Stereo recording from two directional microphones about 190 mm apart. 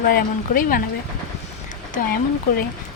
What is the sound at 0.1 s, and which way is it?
Speech, 45° left (ahead or behind).